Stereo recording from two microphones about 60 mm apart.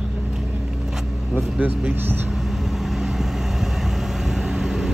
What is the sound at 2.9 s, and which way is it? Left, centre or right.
Vehicle, centre.